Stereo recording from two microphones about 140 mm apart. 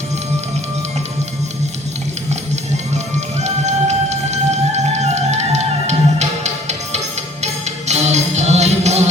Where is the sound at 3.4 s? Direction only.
55° right (ahead or behind).